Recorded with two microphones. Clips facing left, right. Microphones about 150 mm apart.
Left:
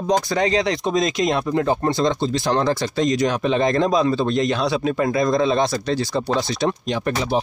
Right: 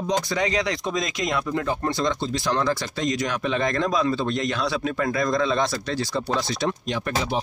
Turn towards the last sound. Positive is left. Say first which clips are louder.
# left 5 dB
turn(degrees=40)  # may be behind; listen again after turning